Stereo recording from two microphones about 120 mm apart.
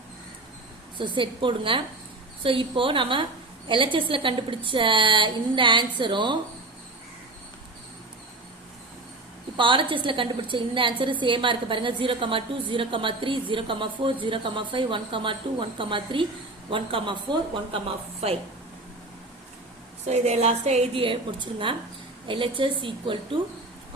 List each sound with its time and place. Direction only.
0.9 s a woman's voice: 40° right (ahead or behind)
9.6 s a woman's voice: 45° right (ahead or behind)
20.1 s speech: 65° right (ahead or behind)
20.9 s a woman's voice: 45° right (ahead or behind)